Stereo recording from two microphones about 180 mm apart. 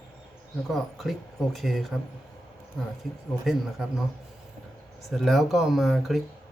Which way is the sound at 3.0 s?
Centre (ahead or behind).